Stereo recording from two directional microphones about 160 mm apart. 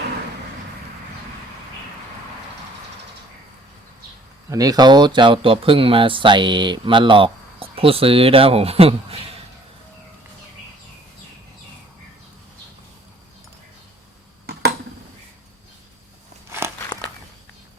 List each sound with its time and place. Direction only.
4.4 s speech: 20° right (ahead or behind); by 9.1 s 35° right (ahead or behind)
16.5 s biting: 15° right (ahead or behind)